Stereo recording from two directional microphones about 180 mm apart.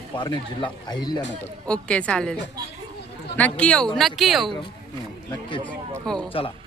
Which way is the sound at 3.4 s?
5° left (ahead or behind).